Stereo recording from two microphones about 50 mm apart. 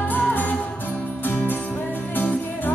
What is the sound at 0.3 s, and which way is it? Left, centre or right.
Music, left.